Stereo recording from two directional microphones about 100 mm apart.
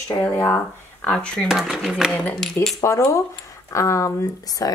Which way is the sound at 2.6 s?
25° left (ahead or behind).